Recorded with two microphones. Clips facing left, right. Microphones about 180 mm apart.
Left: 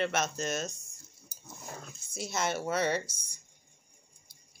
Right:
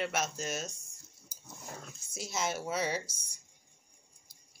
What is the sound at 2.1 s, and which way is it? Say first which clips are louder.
Speech: left 2 dB; 60° left (ahead or behind).